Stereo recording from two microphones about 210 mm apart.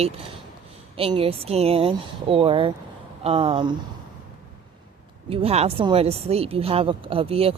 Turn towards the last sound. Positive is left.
turn(degrees=-25)  # may be behind; listen again after turning